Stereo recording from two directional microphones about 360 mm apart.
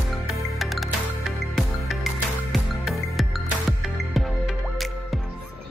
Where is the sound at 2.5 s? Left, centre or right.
Centre.